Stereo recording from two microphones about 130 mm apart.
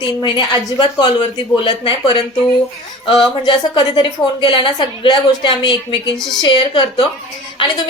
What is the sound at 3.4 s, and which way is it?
A woman's voice, 40° left (ahead or behind).